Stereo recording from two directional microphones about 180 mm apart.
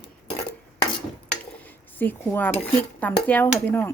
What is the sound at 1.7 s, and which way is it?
Speech, 10° left (ahead or behind).